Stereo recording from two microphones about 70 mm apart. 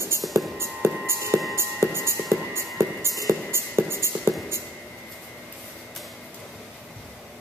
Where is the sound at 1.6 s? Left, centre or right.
Right.